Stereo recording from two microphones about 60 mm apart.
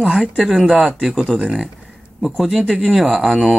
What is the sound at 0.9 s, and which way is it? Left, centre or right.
Speech, centre.